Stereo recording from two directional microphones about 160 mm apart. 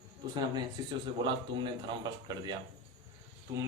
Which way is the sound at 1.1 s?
30° right (ahead or behind).